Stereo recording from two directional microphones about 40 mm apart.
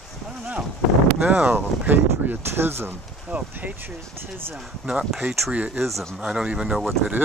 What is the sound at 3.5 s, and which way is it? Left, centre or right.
Speech, right.